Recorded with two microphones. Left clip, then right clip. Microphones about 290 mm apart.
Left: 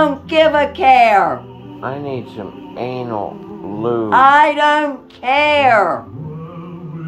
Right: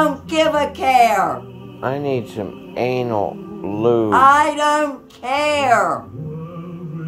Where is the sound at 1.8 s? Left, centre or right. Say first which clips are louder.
Right 3 dB; right.